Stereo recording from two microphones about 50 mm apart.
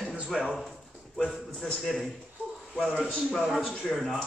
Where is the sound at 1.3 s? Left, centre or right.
Centre.